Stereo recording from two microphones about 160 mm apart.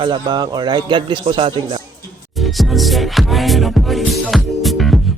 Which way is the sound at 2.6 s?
Centre (ahead or behind).